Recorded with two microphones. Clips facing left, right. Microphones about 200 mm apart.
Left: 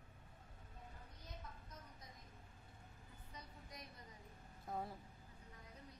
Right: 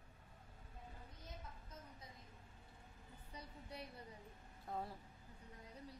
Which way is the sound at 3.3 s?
30° right (ahead or behind).